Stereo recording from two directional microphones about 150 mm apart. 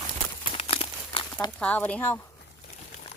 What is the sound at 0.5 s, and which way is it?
Crumpling, 40° left (ahead or behind).